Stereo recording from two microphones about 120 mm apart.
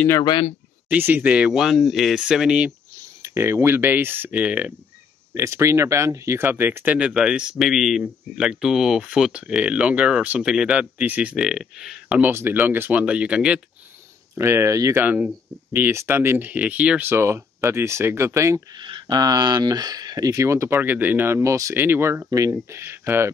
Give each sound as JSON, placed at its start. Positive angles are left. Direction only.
{"t": 0.2, "sound": "speech", "side_deg": 40}
{"t": 0.8, "sound": "speech", "side_deg": -15}
{"t": 3.2, "sound": "speech", "side_deg": -20}
{"t": 5.3, "sound": "speech", "side_deg": -25}
{"t": 12.2, "sound": "speech", "side_deg": -20}
{"t": 14.3, "sound": "speech", "side_deg": -20}
{"t": 15.0, "sound": "speech", "side_deg": -10}
{"t": 18.8, "sound": "speech", "side_deg": -40}